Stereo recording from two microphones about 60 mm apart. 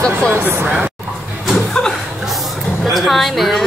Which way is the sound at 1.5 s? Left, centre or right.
Centre.